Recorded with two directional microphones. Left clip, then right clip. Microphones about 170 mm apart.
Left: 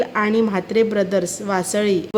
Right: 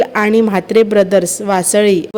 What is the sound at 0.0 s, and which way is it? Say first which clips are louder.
A woman's voice: right 7 dB; 40° right (ahead or behind).